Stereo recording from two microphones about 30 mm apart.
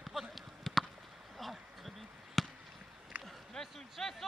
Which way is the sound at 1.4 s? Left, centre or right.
Centre.